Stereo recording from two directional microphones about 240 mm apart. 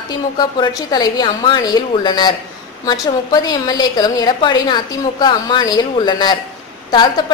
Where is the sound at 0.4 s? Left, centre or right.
Centre.